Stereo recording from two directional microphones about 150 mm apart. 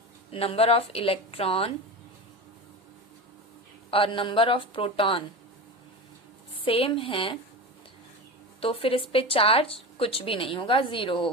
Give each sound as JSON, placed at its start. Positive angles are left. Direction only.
{"t": 0.3, "sound": "a woman's voice", "side_deg": 40}
{"t": 3.9, "sound": "a woman's voice", "side_deg": 35}
{"t": 6.7, "sound": "a woman's voice", "side_deg": 40}
{"t": 8.6, "sound": "a woman's voice", "side_deg": 40}